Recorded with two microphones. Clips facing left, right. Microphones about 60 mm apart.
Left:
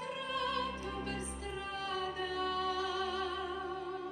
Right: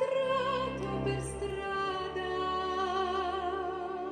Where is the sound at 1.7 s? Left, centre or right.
Right.